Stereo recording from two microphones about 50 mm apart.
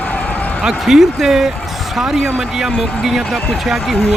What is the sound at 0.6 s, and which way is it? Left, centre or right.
Speech, centre.